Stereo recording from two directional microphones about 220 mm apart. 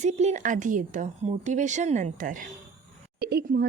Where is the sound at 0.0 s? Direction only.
30° right (ahead or behind).